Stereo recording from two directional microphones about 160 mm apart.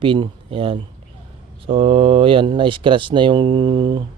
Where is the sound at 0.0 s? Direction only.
30° right (ahead or behind).